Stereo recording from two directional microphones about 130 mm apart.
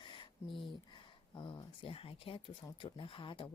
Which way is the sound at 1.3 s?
35° left (ahead or behind).